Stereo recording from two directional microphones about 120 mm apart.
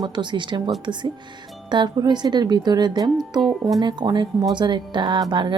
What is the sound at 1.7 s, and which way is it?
Speech, 40° right (ahead or behind).